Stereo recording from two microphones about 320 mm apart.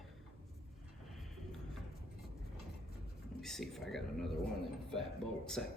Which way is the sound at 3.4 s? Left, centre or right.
Centre.